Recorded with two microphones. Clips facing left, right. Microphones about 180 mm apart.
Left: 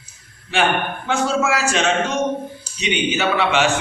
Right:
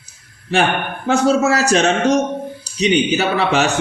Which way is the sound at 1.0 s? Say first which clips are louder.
Right 6 dB; 40° right (ahead or behind).